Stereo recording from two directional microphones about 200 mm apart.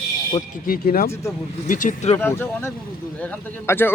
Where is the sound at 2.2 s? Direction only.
10° left (ahead or behind).